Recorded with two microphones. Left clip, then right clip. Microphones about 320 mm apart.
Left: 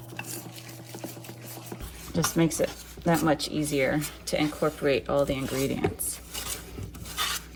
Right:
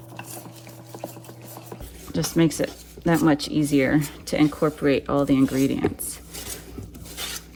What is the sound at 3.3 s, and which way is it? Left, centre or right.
Speech, right.